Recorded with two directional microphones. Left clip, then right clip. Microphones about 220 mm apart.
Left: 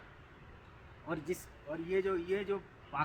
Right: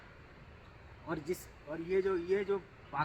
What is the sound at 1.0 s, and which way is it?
Speech, 15° left (ahead or behind).